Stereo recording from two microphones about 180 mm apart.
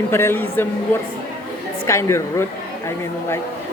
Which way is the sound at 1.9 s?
15° left (ahead or behind).